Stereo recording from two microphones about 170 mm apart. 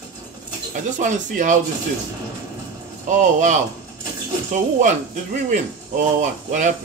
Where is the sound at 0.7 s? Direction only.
45° right (ahead or behind).